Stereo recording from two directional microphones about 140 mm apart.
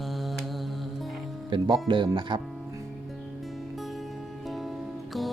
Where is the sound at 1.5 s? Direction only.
35° right (ahead or behind).